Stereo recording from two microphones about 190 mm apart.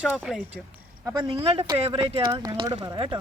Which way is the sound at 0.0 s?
5° right (ahead or behind).